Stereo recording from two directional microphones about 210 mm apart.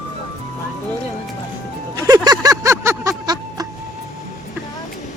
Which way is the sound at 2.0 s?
20° right (ahead or behind).